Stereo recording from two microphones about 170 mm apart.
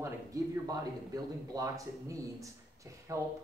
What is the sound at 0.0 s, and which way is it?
Speech, 20° right (ahead or behind).